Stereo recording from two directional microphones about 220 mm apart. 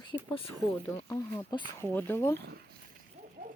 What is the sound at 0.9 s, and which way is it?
Speech, 15° left (ahead or behind).